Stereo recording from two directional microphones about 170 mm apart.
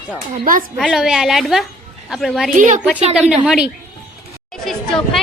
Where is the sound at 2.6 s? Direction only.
45° right (ahead or behind).